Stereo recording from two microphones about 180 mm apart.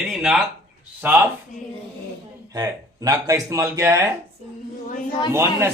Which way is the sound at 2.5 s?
20° right (ahead or behind).